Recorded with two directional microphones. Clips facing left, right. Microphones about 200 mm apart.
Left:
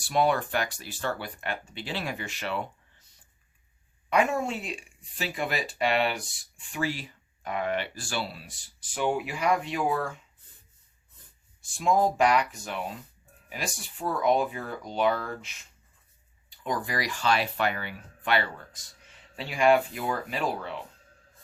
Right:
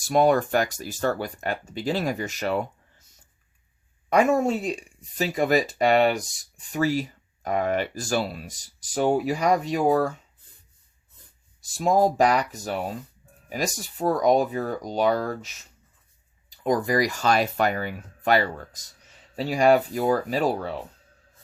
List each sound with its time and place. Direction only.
0.0 s speech: 45° right (ahead or behind)
4.1 s speech: 40° right (ahead or behind)
11.6 s speech: 40° right (ahead or behind)
16.6 s speech: 45° right (ahead or behind)